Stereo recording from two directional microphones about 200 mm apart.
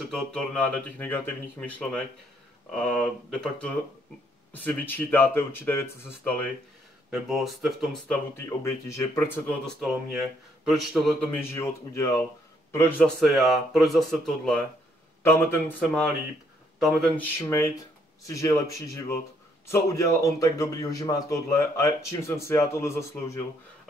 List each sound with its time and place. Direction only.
0.0 s a man's voice: 5° left (ahead or behind)
7.1 s a man's voice: centre (ahead or behind)
9.8 s a man's voice: centre (ahead or behind); by 23.4 s 15° left (ahead or behind)